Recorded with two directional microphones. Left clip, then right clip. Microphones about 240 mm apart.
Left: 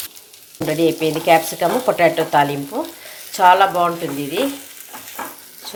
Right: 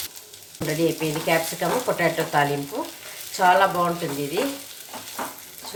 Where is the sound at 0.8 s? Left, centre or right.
Left.